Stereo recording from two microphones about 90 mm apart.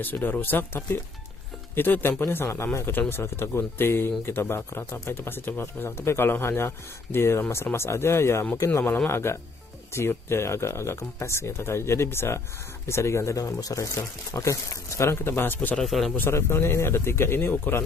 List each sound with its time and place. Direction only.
0.0 s speech: 20° left (ahead or behind)
8.8 s speech: 20° left (ahead or behind)
15.8 s speech: centre (ahead or behind)
16.2 s speech: 30° left (ahead or behind)